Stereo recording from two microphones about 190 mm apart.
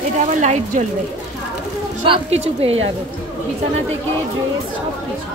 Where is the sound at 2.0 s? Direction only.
30° right (ahead or behind).